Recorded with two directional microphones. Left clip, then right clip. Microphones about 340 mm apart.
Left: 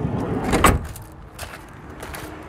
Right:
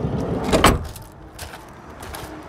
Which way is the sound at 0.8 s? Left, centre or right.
Centre.